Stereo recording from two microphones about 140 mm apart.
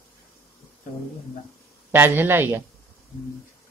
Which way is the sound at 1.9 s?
15° right (ahead or behind).